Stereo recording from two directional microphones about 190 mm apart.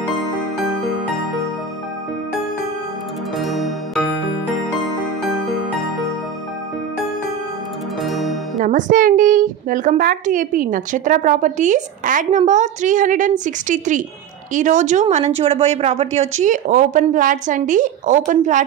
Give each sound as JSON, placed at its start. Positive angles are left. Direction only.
{"t": 3.3, "sound": "music", "side_deg": 0}
{"t": 8.0, "sound": "music", "side_deg": 0}
{"t": 8.5, "sound": "speech", "side_deg": -40}